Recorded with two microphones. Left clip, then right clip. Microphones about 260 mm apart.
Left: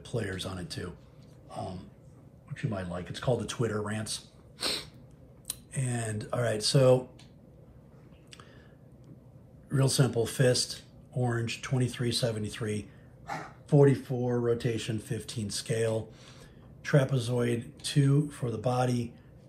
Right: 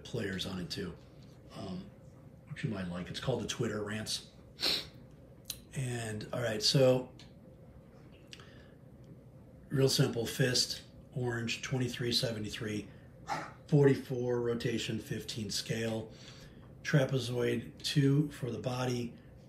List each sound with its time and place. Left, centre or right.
0.0 s speech: centre
9.7 s speech: centre